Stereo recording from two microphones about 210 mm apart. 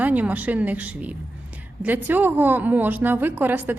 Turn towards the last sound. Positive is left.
turn(degrees=-10)  # may be behind; listen again after turning